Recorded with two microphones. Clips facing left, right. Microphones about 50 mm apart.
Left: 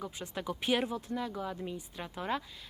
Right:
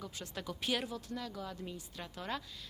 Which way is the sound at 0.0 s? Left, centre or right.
Left.